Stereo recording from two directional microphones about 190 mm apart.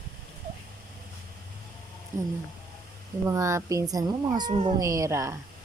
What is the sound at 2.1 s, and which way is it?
Speech, 45° right (ahead or behind).